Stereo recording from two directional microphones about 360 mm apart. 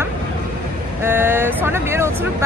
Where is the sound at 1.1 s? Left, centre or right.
Centre.